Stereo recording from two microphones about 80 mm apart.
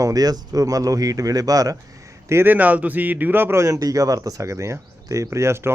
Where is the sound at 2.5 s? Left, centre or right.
Right.